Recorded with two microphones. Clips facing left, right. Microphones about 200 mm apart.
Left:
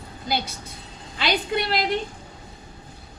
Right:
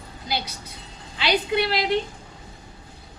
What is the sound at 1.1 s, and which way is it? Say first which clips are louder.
Speech: right 2 dB; 50° left (ahead or behind).